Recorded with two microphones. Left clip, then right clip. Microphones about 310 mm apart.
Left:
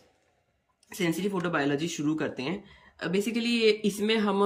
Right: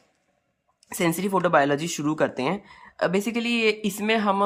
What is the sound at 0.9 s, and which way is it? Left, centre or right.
Speech, centre.